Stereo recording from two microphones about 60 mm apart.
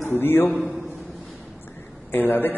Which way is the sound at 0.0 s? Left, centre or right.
Left.